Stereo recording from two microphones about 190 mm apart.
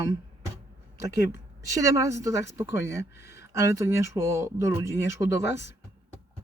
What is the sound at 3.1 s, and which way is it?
Speech, 60° left (ahead or behind).